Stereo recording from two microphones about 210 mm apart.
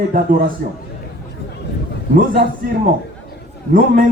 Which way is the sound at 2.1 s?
45° right (ahead or behind).